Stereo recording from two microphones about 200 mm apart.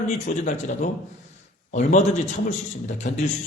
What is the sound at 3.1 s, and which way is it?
Speech, 40° left (ahead or behind).